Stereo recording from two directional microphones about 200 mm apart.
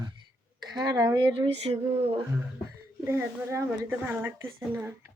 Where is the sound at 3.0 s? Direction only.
10° right (ahead or behind).